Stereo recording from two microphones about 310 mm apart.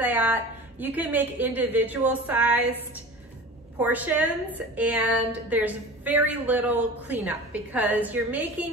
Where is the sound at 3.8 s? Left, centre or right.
Centre.